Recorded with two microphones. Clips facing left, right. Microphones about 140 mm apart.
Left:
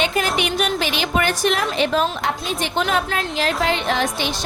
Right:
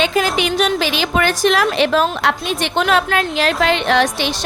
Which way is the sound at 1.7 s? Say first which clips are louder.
Right 4 dB; 80° right.